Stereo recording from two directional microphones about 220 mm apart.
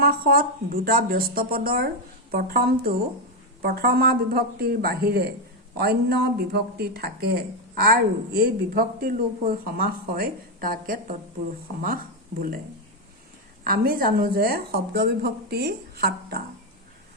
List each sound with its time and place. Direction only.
0.0 s speech: 45° right (ahead or behind)
13.7 s speech: 40° right (ahead or behind)